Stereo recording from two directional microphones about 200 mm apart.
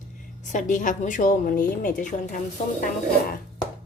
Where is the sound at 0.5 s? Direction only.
40° left (ahead or behind).